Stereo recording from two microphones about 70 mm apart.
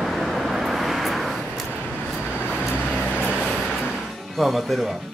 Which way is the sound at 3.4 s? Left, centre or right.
Centre.